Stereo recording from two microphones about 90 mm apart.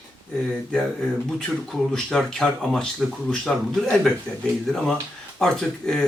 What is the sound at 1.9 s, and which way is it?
Speech, 10° left (ahead or behind).